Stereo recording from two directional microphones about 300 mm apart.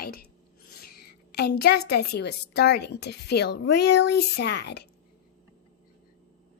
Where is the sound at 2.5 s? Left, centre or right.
Left.